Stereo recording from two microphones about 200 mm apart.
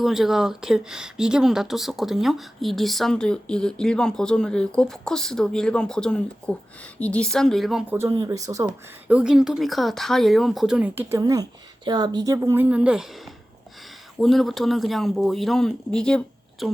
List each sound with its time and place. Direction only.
0.0 s a woman's voice: centre (ahead or behind); by 8.7 s 15° right (ahead or behind)
9.0 s a woman's voice: 5° right (ahead or behind)
14.2 s speech: centre (ahead or behind)